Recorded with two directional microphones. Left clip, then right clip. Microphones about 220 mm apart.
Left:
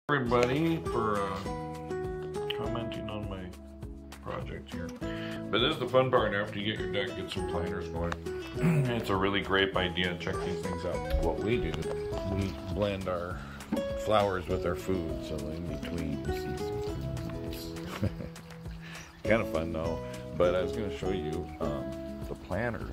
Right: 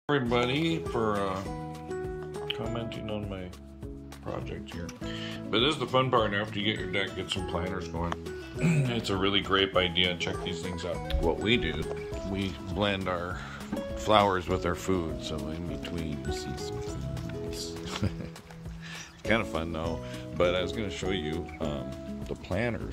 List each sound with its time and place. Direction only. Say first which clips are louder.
0.1 s speech: even; 15° right (ahead or behind)
2.4 s speech: even; 15° right (ahead or behind)
5.0 s speech: even; 10° right (ahead or behind)
10.8 s speech: right 2 dB; centre (ahead or behind)
11.4 s speech: right 3 dB; 10° right (ahead or behind)
15.9 s speech: left 2 dB; centre (ahead or behind)
19.2 s speech: even; 5° right (ahead or behind)
22.5 s speech: right 2 dB; 30° right (ahead or behind)